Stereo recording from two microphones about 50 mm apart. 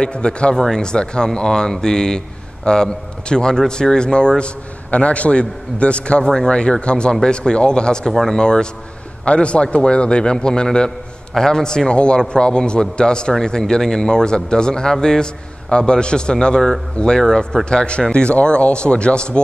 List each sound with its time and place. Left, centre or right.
0.0 s a man's voice: centre
8.1 s speech: centre
8.4 s a man's voice: centre